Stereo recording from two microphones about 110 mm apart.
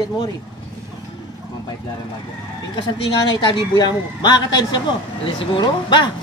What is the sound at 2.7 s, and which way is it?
A man's voice, 45° left (ahead or behind).